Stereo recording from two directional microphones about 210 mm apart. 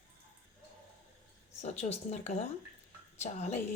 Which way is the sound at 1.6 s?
30° left (ahead or behind).